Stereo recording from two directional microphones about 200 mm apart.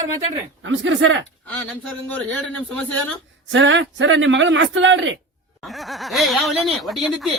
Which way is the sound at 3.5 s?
65° right (ahead or behind).